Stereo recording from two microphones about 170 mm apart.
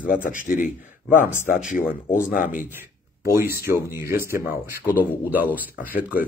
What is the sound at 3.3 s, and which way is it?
Speech, 15° right (ahead or behind).